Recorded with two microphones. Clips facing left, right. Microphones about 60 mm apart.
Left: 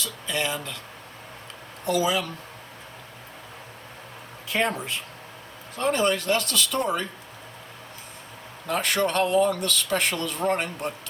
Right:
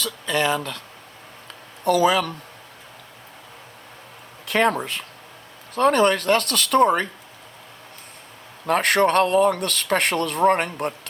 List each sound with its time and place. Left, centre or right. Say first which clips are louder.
0.0 s speech: right 6 dB; right
1.8 s speech: right 6 dB; right
4.4 s speech: right 6 dB; right
8.6 s speech: right 6 dB; right